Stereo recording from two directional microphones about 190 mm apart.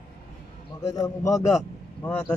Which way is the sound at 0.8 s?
20° left (ahead or behind).